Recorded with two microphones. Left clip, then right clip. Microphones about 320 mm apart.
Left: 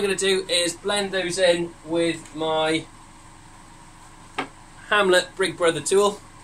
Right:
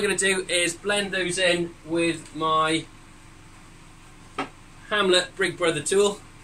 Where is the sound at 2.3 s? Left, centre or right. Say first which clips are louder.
Right 2 dB; left.